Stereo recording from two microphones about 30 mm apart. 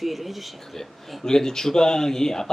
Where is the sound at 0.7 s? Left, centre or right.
Centre.